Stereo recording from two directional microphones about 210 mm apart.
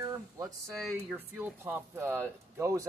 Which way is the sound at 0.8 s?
Centre (ahead or behind).